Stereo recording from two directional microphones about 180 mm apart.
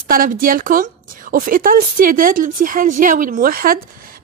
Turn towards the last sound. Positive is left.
turn(degrees=-55)  # may be behind; listen again after turning